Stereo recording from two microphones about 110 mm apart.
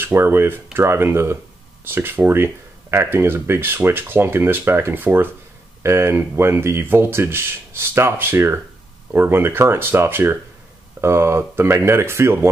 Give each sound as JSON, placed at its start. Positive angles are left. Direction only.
{"t": 0.0, "sound": "speech", "side_deg": -20}